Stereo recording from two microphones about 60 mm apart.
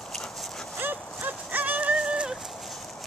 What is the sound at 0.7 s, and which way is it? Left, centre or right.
Clip-clop, right.